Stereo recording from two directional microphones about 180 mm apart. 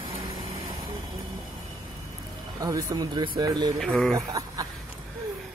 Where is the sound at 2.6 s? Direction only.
20° right (ahead or behind).